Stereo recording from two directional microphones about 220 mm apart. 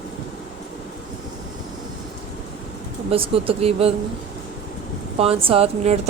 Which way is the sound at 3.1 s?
25° right (ahead or behind).